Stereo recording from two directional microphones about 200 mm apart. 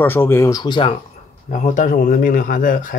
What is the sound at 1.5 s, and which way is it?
Speech, 40° left (ahead or behind).